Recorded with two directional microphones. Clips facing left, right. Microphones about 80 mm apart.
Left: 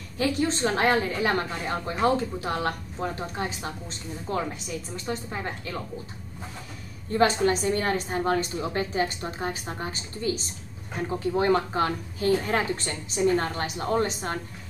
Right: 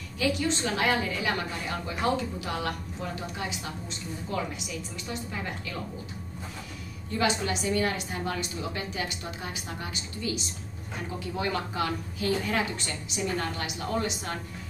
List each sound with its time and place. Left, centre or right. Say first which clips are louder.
0.2 s a woman's voice: left 3 dB; left
7.1 s a woman's voice: left 6 dB; left